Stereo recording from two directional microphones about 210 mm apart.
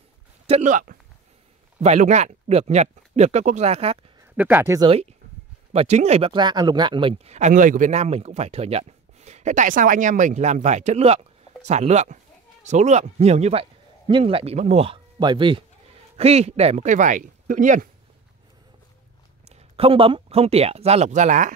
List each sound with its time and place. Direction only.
0.5 s speech: 35° right (ahead or behind)
4.4 s speech: 10° right (ahead or behind)
4.8 s a man's voice: 30° right (ahead or behind)
19.5 s speech: 25° right (ahead or behind)